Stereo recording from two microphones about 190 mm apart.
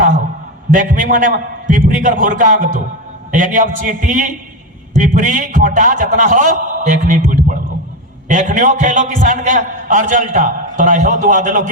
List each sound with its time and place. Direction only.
0.7 s a man's voice: 45° right (ahead or behind)